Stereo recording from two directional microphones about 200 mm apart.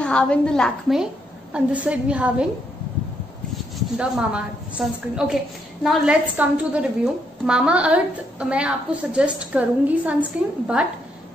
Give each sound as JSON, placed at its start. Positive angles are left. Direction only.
{"t": 0.0, "sound": "a woman's voice", "side_deg": 5}
{"t": 3.7, "sound": "a woman's voice", "side_deg": -5}